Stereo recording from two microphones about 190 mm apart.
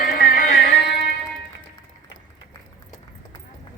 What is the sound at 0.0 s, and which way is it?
Music, 45° left (ahead or behind).